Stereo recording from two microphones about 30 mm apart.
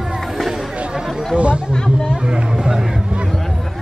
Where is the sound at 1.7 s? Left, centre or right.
Left.